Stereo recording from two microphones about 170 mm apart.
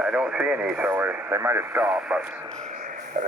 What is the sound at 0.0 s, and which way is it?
Speech, 5° right (ahead or behind).